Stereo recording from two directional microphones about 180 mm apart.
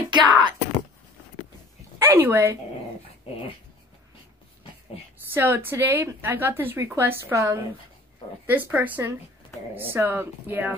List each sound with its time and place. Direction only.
0.1 s speech: 25° right (ahead or behind)
2.0 s speech: 10° right (ahead or behind)
5.3 s a woman's voice: 10° right (ahead or behind)